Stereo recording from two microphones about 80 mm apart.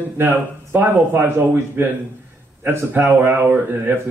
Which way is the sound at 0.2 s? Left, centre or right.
Right.